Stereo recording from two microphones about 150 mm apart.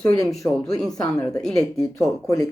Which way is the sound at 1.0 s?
25° left (ahead or behind).